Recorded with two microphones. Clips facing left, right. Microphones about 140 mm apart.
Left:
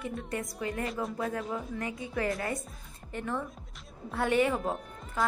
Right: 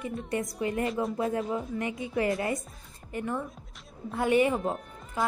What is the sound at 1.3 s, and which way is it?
Speech, 25° right (ahead or behind).